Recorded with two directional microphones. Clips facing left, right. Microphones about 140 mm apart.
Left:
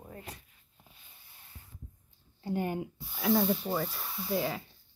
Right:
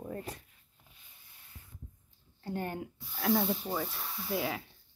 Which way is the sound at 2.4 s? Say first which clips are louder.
Left 4 dB; 15° left (ahead or behind).